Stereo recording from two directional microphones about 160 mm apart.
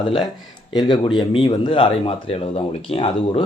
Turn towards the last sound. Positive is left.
turn(degrees=35)  # may be behind; listen again after turning